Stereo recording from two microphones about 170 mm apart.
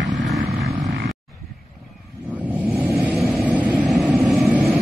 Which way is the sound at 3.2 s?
5° right (ahead or behind).